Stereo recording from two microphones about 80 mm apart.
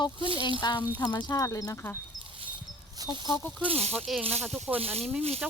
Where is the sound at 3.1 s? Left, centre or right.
Right.